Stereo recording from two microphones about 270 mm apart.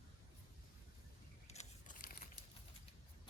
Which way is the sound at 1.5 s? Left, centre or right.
Left.